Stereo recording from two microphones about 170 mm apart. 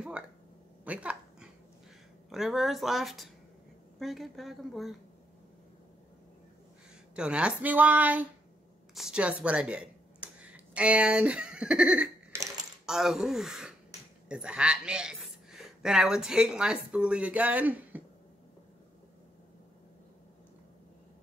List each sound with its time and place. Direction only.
0.8 s dog: 5° right (ahead or behind)
2.2 s speech: centre (ahead or behind)
7.2 s a woman's voice: 5° right (ahead or behind)
12.3 s typewriter: 15° right (ahead or behind)
12.8 s a woman's voice: 5° right (ahead or behind)